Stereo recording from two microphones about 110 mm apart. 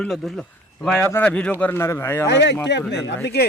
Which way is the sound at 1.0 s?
20° left (ahead or behind).